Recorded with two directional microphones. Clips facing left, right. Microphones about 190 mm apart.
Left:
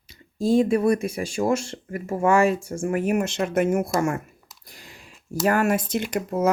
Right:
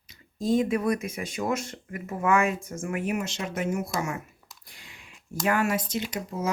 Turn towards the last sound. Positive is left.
turn(degrees=55)  # may be behind; listen again after turning